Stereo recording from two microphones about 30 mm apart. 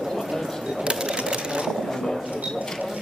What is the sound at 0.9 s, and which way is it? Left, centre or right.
Sewing machine, right.